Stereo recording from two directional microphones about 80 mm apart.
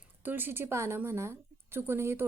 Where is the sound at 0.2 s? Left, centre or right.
Right.